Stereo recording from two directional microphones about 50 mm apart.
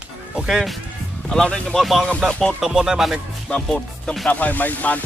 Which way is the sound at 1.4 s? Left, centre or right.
Centre.